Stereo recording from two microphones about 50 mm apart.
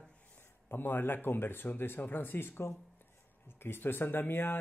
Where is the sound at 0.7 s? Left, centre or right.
Left.